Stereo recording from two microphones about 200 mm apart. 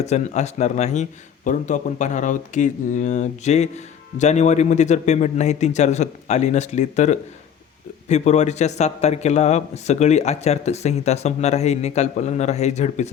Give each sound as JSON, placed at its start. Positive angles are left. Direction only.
{"t": 0.0, "sound": "a man's voice", "side_deg": 35}